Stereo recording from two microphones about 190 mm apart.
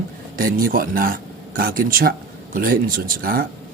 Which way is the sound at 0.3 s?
50° right (ahead or behind).